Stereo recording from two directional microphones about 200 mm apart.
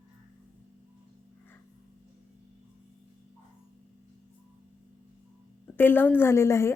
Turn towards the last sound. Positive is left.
turn(degrees=15)  # may be behind; listen again after turning